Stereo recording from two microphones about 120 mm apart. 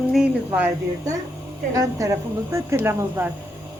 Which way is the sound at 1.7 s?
25° right (ahead or behind).